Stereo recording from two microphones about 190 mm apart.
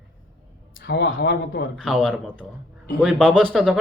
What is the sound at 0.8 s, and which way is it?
Speech, 65° left (ahead or behind).